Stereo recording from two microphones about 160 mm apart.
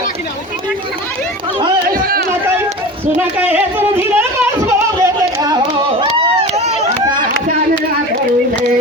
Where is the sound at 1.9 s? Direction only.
65° right (ahead or behind).